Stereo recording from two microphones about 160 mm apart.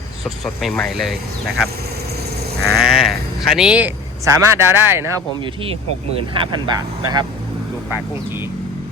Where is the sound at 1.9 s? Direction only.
85° right.